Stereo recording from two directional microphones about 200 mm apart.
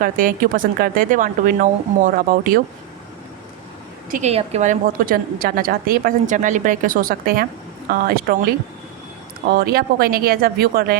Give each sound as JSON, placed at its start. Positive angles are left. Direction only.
{"t": 0.0, "sound": "a woman's voice", "side_deg": -45}
{"t": 4.1, "sound": "a woman's voice", "side_deg": -35}